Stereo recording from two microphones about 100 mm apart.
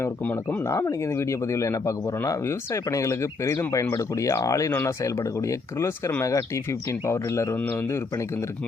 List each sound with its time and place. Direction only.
0.0 s speech: 20° left (ahead or behind)
7.6 s speech: 15° left (ahead or behind)
7.9 s speech: 25° left (ahead or behind)